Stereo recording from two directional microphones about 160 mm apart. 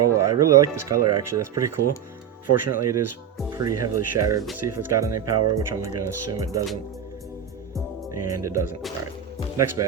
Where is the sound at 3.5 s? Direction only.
20° right (ahead or behind).